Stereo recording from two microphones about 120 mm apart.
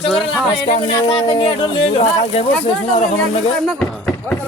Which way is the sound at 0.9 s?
45° left (ahead or behind).